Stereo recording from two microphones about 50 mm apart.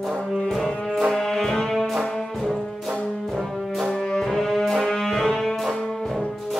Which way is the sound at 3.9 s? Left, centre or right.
Centre.